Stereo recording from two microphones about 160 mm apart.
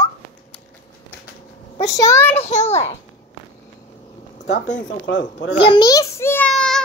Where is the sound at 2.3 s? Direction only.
45° left (ahead or behind).